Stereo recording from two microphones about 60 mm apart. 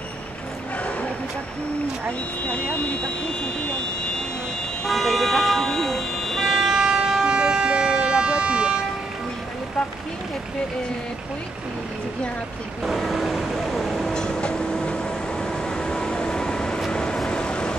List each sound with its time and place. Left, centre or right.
2.5 s speech: left
4.8 s vehicle: centre
6.4 s vehicle: centre
12.8 s vehicle: centre